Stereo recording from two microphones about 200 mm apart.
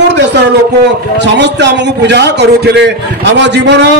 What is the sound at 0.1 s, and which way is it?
A man's voice, 60° right (ahead or behind).